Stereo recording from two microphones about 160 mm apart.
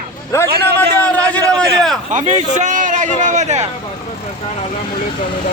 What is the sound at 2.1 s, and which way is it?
A man's voice, 50° right (ahead or behind).